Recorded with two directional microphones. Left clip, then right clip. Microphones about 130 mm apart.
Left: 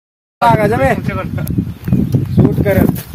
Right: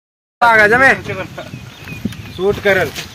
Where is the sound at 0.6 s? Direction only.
10° left (ahead or behind).